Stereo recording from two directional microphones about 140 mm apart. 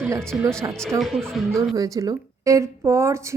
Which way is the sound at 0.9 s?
Centre (ahead or behind).